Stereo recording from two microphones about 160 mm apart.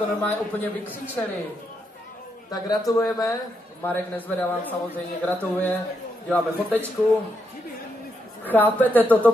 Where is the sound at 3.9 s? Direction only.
10° left (ahead or behind).